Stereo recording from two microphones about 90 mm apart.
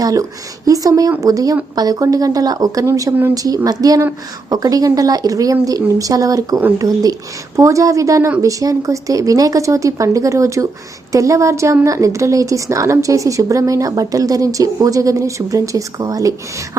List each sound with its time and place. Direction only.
0.0 s a woman's voice: 40° right (ahead or behind)